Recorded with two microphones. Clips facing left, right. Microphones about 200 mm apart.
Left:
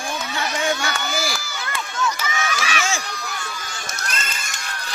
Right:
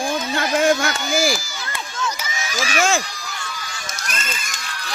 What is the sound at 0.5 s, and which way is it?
Run, 50° right (ahead or behind).